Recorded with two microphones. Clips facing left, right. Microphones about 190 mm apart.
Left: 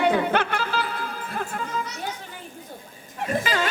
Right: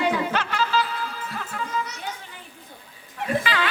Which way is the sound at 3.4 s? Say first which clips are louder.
Left 2 dB; 45° left (ahead or behind).